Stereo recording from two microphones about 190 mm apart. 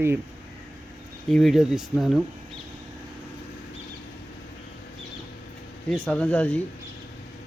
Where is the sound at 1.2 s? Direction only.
Centre (ahead or behind).